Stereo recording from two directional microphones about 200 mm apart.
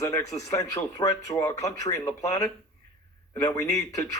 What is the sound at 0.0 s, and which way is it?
Speech, 15° left (ahead or behind).